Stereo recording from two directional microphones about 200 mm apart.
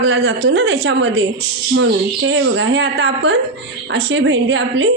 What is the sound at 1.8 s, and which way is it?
A woman's voice, 75° right (ahead or behind).